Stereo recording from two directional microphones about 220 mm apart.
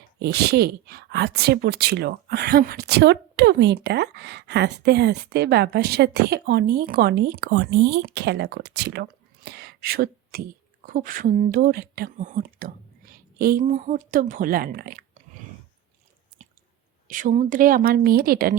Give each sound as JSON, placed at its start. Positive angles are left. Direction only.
{"t": 0.2, "sound": "a woman's voice", "side_deg": -50}
{"t": 17.1, "sound": "a woman's voice", "side_deg": -35}